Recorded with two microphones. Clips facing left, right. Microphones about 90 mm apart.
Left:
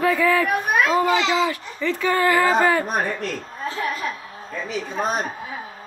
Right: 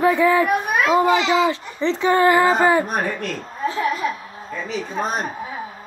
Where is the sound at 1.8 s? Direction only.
25° right (ahead or behind).